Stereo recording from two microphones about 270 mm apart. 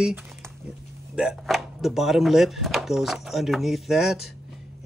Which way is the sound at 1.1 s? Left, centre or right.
Centre.